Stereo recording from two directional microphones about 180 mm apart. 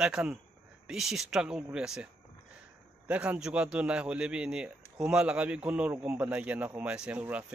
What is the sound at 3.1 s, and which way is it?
A man's voice, 5° right (ahead or behind).